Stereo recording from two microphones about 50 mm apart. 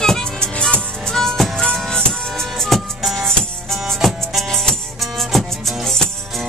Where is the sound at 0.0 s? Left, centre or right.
Centre.